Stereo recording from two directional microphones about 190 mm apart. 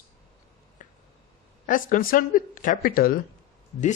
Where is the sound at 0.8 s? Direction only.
40° left (ahead or behind).